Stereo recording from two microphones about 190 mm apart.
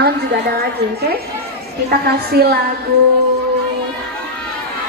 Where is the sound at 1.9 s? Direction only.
55° right (ahead or behind).